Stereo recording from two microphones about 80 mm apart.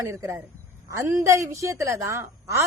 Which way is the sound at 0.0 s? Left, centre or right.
Right.